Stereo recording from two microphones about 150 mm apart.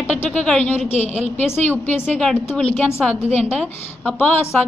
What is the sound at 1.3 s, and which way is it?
Speech, 15° left (ahead or behind).